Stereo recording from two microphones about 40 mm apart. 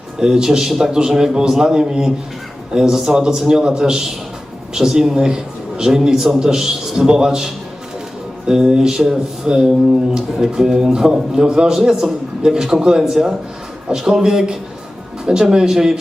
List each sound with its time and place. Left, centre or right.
0.2 s a man's voice: centre